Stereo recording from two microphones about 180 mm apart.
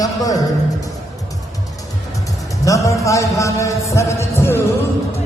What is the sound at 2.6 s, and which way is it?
Music, 15° left (ahead or behind).